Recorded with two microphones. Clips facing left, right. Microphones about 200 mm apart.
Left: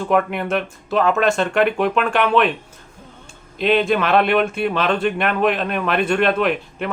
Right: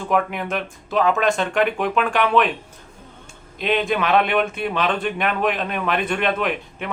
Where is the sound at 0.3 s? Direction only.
Centre (ahead or behind).